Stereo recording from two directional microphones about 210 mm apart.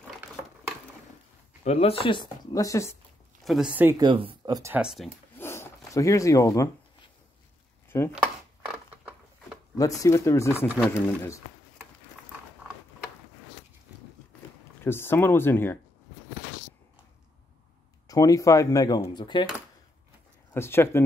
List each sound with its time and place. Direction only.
1.6 s speech: 30° left (ahead or behind)
3.4 s speech: 5° right (ahead or behind)
4.0 s speech: 25° right (ahead or behind)
5.4 s a sound: 10° left (ahead or behind)
5.9 s speech: 15° left (ahead or behind)
8.1 s a sound: 5° right (ahead or behind)
9.8 s speech: 15° left (ahead or behind)
14.8 s speech: 10° left (ahead or behind)
18.0 s speech: 15° left (ahead or behind)
20.5 s speech: 10° left (ahead or behind)